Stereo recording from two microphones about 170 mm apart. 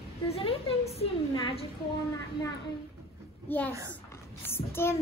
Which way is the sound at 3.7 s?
20° right (ahead or behind).